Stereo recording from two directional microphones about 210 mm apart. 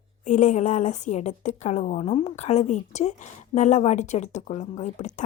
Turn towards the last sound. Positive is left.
turn(degrees=35)  # may be behind; listen again after turning